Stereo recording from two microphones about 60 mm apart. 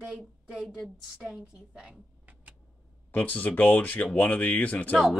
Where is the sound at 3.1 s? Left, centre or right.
Left.